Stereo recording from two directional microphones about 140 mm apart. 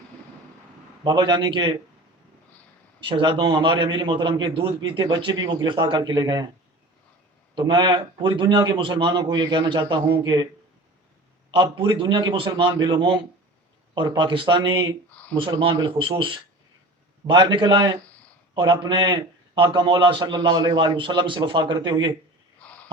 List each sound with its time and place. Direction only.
1.0 s a man's voice: 35° right (ahead or behind)
3.1 s a man's voice: 35° right (ahead or behind)
7.5 s a man's voice: 35° right (ahead or behind)
11.5 s a man's voice: 35° right (ahead or behind)